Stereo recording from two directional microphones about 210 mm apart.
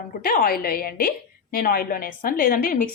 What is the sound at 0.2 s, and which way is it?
A woman's voice, 45° left (ahead or behind).